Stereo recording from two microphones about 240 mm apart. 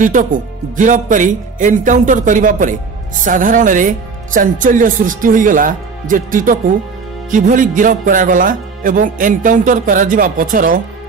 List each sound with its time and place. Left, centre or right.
0.0 s speech: right